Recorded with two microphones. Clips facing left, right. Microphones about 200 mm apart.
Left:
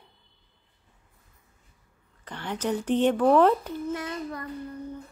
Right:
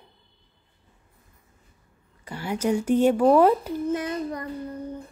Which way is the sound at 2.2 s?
10° right (ahead or behind).